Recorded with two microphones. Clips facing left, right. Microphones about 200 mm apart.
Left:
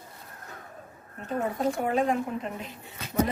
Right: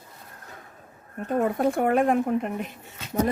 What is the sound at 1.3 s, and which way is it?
Speech, 55° right (ahead or behind).